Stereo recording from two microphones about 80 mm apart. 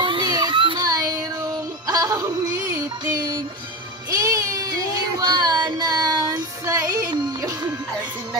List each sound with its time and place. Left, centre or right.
0.0 s baby cry: right
0.8 s child singing: right
1.9 s music: right
5.2 s child singing: right
6.6 s music: right